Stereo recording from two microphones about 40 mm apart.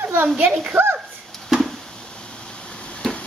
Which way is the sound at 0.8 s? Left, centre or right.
Right.